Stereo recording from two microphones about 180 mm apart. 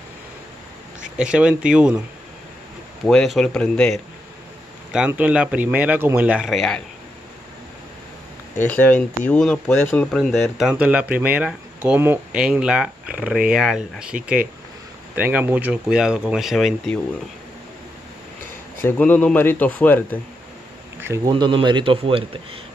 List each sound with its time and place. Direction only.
1.1 s speech: 5° right (ahead or behind)
3.1 s speech: centre (ahead or behind)
4.9 s speech: 5° right (ahead or behind)
8.5 s speech: 10° left (ahead or behind)
15.1 s speech: 10° right (ahead or behind)
18.8 s speech: 10° left (ahead or behind)
21.0 s speech: 20° right (ahead or behind)